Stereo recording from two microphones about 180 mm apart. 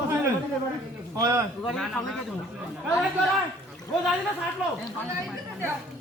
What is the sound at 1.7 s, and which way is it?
Speech, centre (ahead or behind).